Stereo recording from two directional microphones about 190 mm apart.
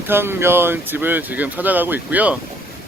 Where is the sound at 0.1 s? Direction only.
10° right (ahead or behind).